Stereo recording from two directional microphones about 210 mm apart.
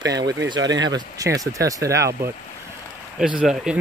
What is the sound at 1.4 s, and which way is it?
Speech, 15° right (ahead or behind).